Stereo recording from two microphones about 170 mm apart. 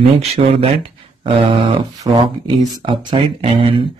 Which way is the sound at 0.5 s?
35° right (ahead or behind).